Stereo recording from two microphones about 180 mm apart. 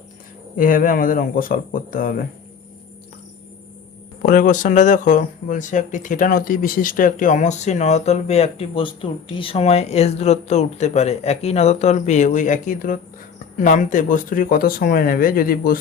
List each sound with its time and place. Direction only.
0.5 s speech: 50° left (ahead or behind)
4.3 s speech: 45° left (ahead or behind)